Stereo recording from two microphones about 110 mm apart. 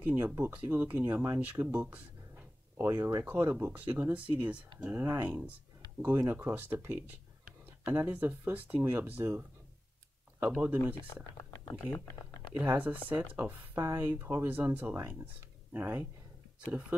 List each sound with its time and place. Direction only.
0.0 s speech: 15° right (ahead or behind)
11.3 s typing: 35° left (ahead or behind)
12.5 s speech: 15° right (ahead or behind)